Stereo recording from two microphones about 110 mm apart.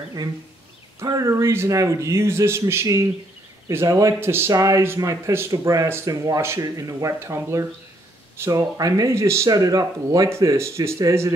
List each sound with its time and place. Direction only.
1.0 s speech: 30° right (ahead or behind)